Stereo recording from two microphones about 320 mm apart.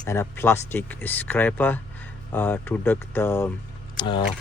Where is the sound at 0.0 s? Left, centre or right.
Centre.